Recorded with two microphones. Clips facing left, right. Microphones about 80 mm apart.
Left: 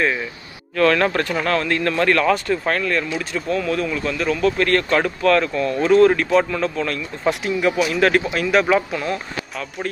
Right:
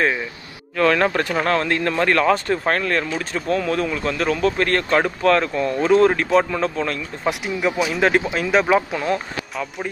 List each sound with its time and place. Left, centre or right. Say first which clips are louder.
0.7 s speech: left 1 dB; centre
1.4 s speech: right 1 dB; right
7.2 s speech: left 2 dB; centre
8.9 s speech: right 2 dB; right